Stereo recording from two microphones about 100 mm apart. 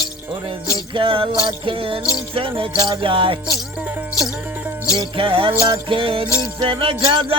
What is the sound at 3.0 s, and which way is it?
Music, 60° right (ahead or behind).